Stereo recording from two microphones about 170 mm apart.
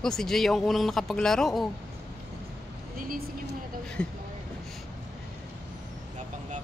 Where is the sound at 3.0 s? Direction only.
60° right (ahead or behind).